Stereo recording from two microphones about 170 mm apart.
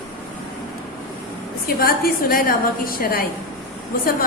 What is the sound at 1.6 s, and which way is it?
A woman's voice, 60° left (ahead or behind).